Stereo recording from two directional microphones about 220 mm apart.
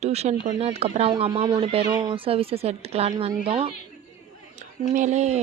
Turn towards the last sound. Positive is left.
turn(degrees=-30)  # may be behind; listen again after turning